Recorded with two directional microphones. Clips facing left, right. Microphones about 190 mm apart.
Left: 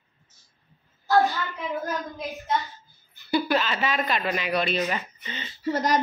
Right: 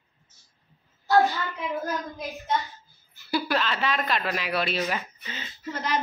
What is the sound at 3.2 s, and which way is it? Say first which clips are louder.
Speech: left 3 dB; centre (ahead or behind).